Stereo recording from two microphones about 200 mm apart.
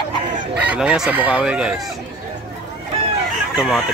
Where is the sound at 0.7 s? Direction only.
5° right (ahead or behind).